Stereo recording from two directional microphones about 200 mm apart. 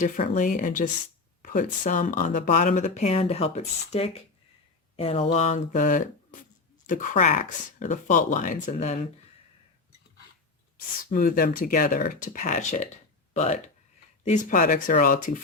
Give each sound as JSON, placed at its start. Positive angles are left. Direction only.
{"t": 0.0, "sound": "speech", "side_deg": 40}
{"t": 11.1, "sound": "speech", "side_deg": 45}